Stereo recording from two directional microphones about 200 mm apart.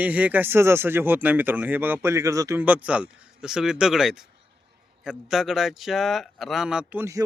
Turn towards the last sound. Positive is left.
turn(degrees=-10)  # may be behind; listen again after turning